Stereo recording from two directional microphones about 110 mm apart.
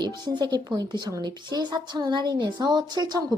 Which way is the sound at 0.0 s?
40° right (ahead or behind).